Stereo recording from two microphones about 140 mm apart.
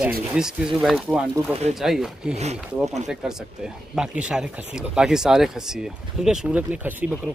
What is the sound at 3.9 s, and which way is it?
Speech, 5° right (ahead or behind).